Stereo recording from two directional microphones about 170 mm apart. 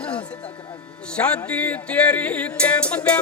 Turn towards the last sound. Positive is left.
turn(degrees=5)  # may be behind; listen again after turning